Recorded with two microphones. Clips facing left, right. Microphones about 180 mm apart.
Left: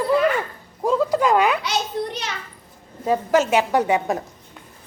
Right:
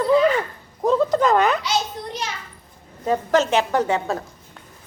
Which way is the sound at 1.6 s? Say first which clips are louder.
Left 1 dB; 65° left (ahead or behind).